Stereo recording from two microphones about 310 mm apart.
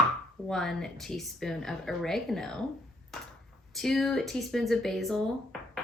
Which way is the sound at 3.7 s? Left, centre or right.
Centre.